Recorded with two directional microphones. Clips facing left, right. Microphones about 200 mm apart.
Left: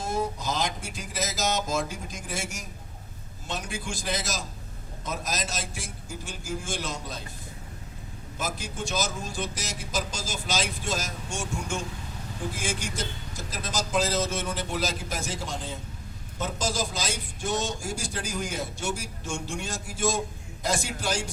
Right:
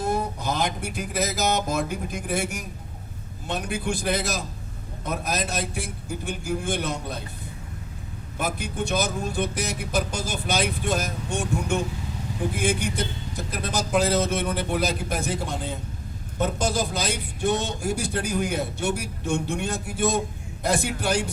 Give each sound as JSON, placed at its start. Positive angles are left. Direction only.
{"t": 0.0, "sound": "a man's voice", "side_deg": -60}
{"t": 8.4, "sound": "a man's voice", "side_deg": -60}